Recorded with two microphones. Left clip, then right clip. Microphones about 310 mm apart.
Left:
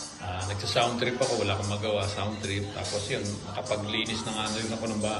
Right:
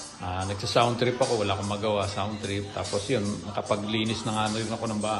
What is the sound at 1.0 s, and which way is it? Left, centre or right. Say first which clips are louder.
A man's voice: right 2 dB; centre.